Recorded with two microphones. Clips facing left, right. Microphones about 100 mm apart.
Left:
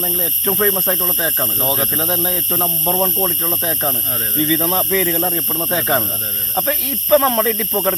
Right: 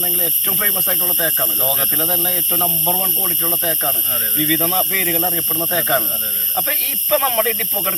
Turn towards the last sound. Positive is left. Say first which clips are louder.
# left 4 dB
turn(degrees=20)  # may be behind; listen again after turning